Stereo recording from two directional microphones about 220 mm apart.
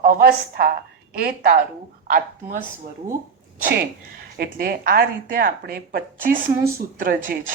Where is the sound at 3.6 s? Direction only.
45° right (ahead or behind).